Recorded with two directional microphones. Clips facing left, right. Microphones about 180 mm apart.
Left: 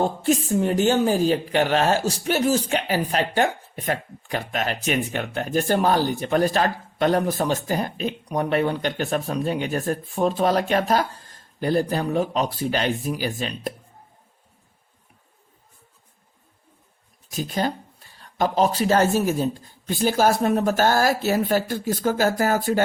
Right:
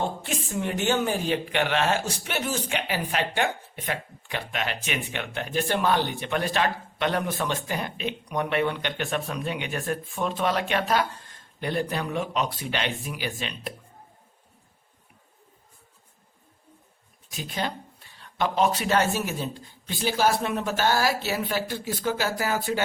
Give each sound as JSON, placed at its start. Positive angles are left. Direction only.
{"t": 0.0, "sound": "speech", "side_deg": 40}
{"t": 17.3, "sound": "speech", "side_deg": 40}